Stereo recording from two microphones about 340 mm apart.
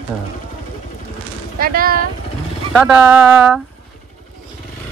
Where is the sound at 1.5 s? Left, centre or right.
Right.